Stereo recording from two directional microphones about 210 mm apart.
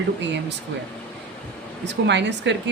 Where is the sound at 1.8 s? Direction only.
55° right (ahead or behind).